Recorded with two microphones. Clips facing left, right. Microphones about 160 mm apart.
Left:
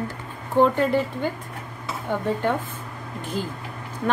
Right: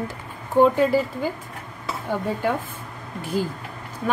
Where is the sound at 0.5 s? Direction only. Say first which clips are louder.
Right 2 dB; 5° right (ahead or behind).